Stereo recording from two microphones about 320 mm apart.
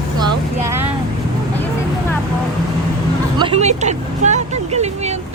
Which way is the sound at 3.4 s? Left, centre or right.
Centre.